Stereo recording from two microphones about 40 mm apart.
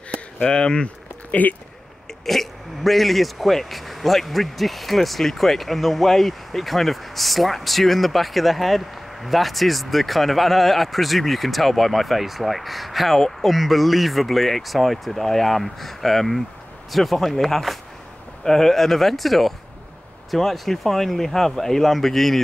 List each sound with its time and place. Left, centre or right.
0.1 s speech: left
1.3 s speech: left
2.2 s speech: centre